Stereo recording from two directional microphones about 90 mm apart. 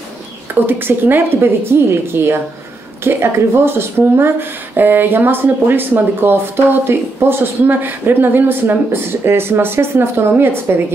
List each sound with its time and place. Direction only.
0.6 s speech: 25° right (ahead or behind)